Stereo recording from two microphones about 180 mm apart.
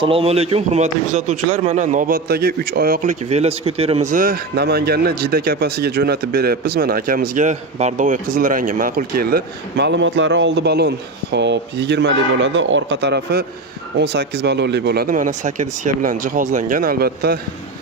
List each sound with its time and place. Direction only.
0.0 s a man's voice: 30° right (ahead or behind); by 17.3 s 55° right (ahead or behind)